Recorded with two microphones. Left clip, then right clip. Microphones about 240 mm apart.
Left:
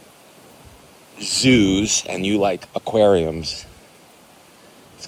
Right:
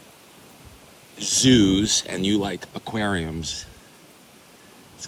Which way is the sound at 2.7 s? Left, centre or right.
Right.